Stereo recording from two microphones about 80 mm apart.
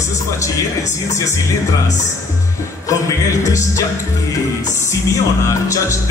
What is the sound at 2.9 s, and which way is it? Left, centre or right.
Speech, left.